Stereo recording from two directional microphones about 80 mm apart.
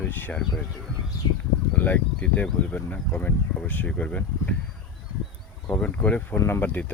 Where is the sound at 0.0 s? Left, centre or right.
Left.